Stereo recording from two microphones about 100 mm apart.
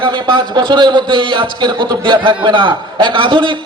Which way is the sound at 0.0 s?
50° right (ahead or behind).